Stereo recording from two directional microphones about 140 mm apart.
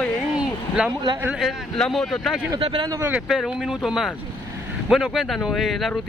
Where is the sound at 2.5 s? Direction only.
35° right (ahead or behind).